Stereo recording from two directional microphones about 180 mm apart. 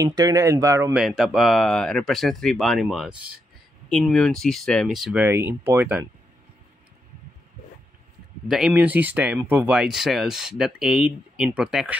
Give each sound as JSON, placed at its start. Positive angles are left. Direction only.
{"t": 0.0, "sound": "speech", "side_deg": -20}
{"t": 0.9, "sound": "speech", "side_deg": 0}
{"t": 5.2, "sound": "speech", "side_deg": -10}
{"t": 8.5, "sound": "speech", "side_deg": -5}